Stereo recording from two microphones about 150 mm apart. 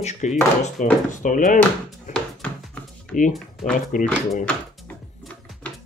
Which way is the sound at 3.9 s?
60° left (ahead or behind).